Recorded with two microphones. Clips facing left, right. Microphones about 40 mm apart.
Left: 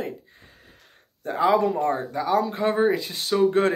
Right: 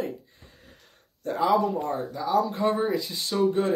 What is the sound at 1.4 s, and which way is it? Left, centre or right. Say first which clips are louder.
Speech: left 3 dB; left.